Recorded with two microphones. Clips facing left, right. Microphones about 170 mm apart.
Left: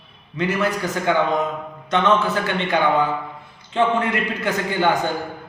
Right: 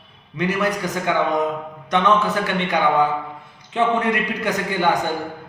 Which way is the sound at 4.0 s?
15° right (ahead or behind).